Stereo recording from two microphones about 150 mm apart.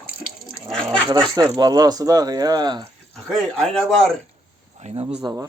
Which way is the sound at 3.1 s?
5° left (ahead or behind).